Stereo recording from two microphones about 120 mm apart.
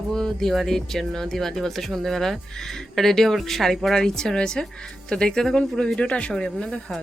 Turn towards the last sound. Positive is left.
turn(degrees=5)  # may be behind; listen again after turning